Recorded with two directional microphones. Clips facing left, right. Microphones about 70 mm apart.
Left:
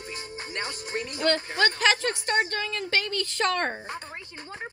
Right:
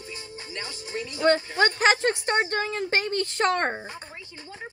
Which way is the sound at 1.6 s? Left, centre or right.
Right.